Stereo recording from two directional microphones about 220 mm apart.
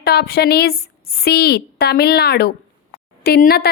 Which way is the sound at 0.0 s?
45° left (ahead or behind).